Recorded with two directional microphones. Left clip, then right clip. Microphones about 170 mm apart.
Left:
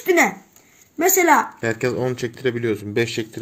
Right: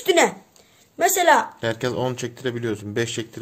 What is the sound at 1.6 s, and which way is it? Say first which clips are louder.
Speech: left 2 dB; 5° right (ahead or behind).